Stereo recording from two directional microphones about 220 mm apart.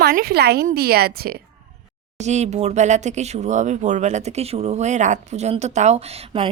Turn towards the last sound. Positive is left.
turn(degrees=-30)  # may be behind; listen again after turning